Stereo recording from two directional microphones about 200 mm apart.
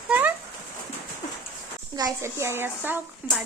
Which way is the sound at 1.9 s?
15° right (ahead or behind).